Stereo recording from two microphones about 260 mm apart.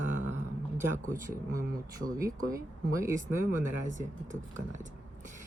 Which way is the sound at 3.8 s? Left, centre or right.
Right.